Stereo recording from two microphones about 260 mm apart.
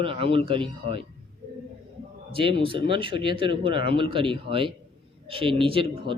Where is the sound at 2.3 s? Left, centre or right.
Centre.